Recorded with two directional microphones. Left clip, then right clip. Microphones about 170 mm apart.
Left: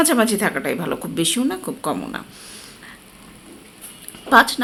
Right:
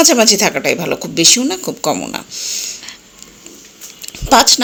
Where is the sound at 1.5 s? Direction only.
35° right (ahead or behind).